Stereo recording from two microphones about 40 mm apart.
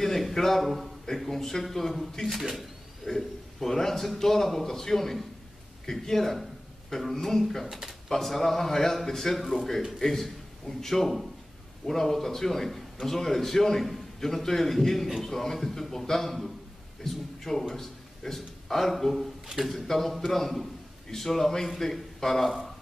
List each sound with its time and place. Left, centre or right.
0.0 s a sound: centre
1.0 s a man's voice: centre
3.1 s a man's voice: centre
7.6 s speech: centre
8.1 s a man's voice: centre